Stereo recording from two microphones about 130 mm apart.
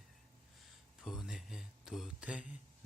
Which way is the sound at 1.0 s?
5° right (ahead or behind).